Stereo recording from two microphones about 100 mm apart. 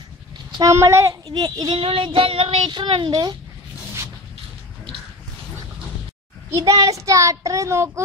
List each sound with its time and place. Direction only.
0.7 s a child's voice: 30° right (ahead or behind)
1.2 s a woman's voice: 45° right (ahead or behind)
1.8 s child singing: 65° right (ahead or behind)
2.7 s a woman's voice: 50° right (ahead or behind)
6.5 s a child's voice: 35° right (ahead or behind)